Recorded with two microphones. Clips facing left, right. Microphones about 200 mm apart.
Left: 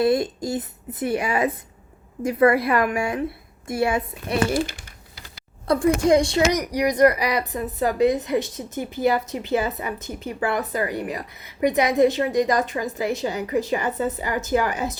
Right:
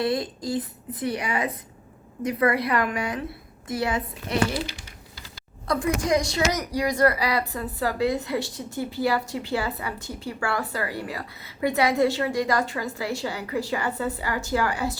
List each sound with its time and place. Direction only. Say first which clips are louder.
0.0 s speech: left 5 dB; 25° left (ahead or behind)
4.5 s speech: left 6 dB; 50° left (ahead or behind)
6.0 s speech: left 6 dB; 30° left (ahead or behind)